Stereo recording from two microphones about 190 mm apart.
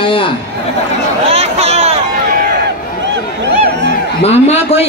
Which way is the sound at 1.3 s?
35° right (ahead or behind).